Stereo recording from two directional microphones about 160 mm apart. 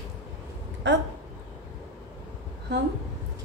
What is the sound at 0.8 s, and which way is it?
Speech, 90° right.